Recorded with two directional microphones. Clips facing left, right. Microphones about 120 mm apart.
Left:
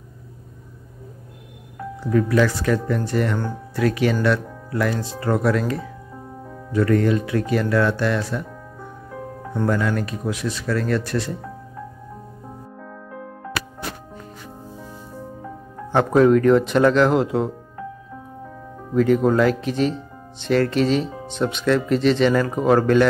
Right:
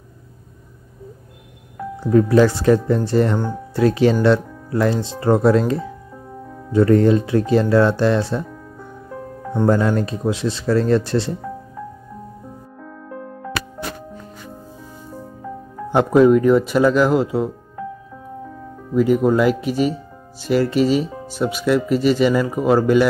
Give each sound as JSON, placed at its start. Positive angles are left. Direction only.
{"t": 2.0, "sound": "speech", "side_deg": -30}
{"t": 9.7, "sound": "speech", "side_deg": -30}
{"t": 15.9, "sound": "speech", "side_deg": -10}
{"t": 18.9, "sound": "speech", "side_deg": -10}